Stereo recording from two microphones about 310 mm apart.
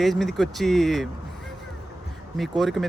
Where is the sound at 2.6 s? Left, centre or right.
Centre.